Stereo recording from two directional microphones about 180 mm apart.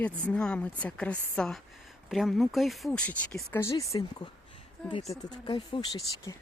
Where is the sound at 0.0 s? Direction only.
5° left (ahead or behind).